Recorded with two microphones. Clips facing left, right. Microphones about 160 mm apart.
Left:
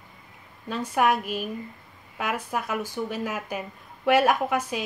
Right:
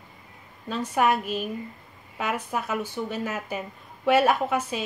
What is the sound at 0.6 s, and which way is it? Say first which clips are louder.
Speech: even; 5° left (ahead or behind).